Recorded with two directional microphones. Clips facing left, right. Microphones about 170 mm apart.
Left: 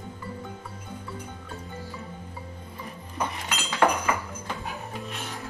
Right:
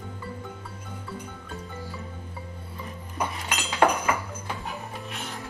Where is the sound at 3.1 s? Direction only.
15° right (ahead or behind).